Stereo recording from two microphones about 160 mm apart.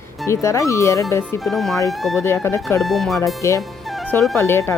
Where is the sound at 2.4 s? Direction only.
15° left (ahead or behind).